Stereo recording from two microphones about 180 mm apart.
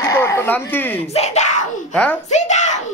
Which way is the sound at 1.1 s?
40° left (ahead or behind).